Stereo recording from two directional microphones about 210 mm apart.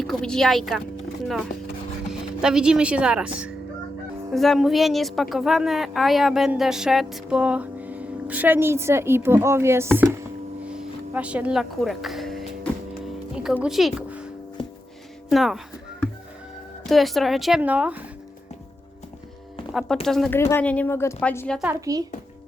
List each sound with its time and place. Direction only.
0.0 s a woman's voice: centre (ahead or behind)
2.4 s a woman's voice: 5° right (ahead or behind)
13.3 s music: 5° right (ahead or behind)
15.3 s a sound: centre (ahead or behind)
16.8 s a woman's voice: centre (ahead or behind)
20.1 s a woman's voice: centre (ahead or behind)
21.7 s speech: 15° right (ahead or behind)